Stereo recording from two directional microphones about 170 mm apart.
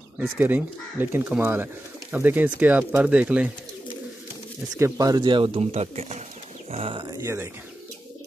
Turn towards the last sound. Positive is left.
turn(degrees=-15)  # may be behind; listen again after turning